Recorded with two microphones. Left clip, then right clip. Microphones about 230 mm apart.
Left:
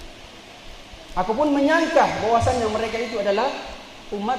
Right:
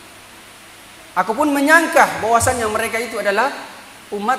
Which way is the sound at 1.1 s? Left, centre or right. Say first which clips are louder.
Right 3 dB; right.